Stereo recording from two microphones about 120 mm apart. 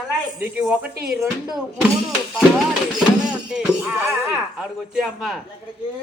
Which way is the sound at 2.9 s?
5° right (ahead or behind).